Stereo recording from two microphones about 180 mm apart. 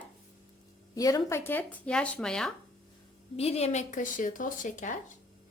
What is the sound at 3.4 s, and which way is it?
Speech, 35° left (ahead or behind).